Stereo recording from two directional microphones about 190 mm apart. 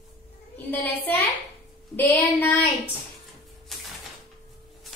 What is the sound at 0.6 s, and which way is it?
A woman's voice, 10° left (ahead or behind).